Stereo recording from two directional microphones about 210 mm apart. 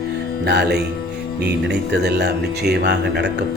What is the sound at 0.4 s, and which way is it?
A man's voice, 50° right (ahead or behind).